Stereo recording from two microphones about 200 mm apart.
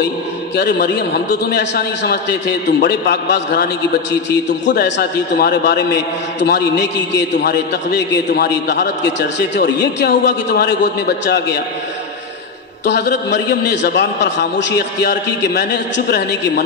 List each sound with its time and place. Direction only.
0.6 s a man's voice: 55° left (ahead or behind)
12.8 s a man's voice: 60° left (ahead or behind)